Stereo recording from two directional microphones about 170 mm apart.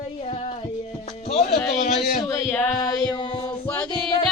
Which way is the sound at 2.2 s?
20° left (ahead or behind).